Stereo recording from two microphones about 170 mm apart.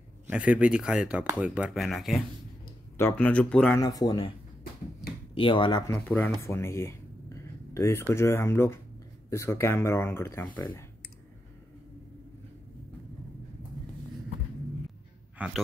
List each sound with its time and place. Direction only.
0.3 s speech: 5° right (ahead or behind)
3.0 s speech: 10° left (ahead or behind)
3.8 s speech: 25° left (ahead or behind)
5.3 s speech: 30° left (ahead or behind)
5.9 s speech: 10° left (ahead or behind)
6.4 s a sound: 15° left (ahead or behind)
8.1 s speech: 15° left (ahead or behind)
15.3 s a sound: 5° right (ahead or behind)